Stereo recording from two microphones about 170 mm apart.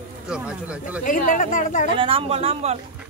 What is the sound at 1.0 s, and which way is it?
Speech, 50° left (ahead or behind).